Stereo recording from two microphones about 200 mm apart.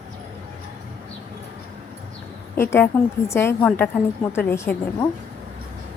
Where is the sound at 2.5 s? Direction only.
10° left (ahead or behind).